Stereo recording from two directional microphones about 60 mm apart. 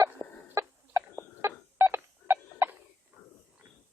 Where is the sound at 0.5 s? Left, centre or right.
Right.